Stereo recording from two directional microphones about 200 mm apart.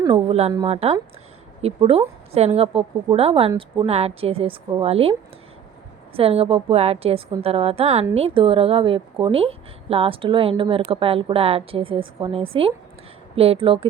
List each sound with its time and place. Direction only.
0.0 s a woman's voice: 30° right (ahead or behind)
6.1 s a woman's voice: 30° right (ahead or behind)